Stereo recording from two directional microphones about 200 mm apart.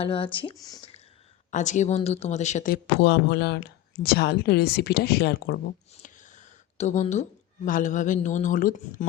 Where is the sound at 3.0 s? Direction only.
55° left (ahead or behind).